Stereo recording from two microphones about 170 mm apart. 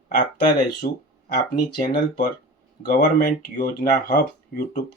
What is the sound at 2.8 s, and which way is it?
Speech, 55° left (ahead or behind).